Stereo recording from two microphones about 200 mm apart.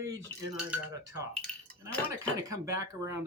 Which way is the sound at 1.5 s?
5° left (ahead or behind).